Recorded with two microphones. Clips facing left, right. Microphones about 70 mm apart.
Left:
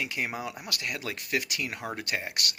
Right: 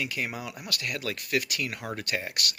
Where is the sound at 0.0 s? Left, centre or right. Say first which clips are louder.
Even; left.